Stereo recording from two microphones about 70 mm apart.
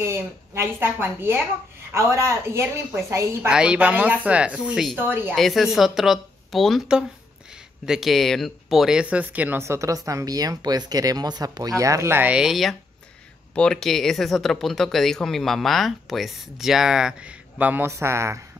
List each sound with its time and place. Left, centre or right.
0.0 s speech: right
3.4 s speech: centre
4.9 s speech: right
5.3 s speech: centre
7.8 s speech: centre
9.0 s speech: right
9.6 s speech: right
12.3 s speech: centre
13.6 s speech: centre; by 17.8 s right
17.8 s speech: right